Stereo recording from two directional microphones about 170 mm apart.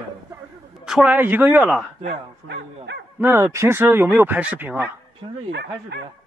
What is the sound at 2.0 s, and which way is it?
Speech, 90° right.